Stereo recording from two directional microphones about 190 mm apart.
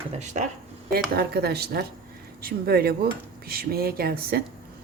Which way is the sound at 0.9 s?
55° right (ahead or behind).